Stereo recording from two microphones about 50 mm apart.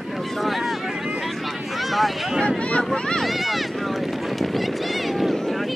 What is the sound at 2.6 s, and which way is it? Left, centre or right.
Speech, left.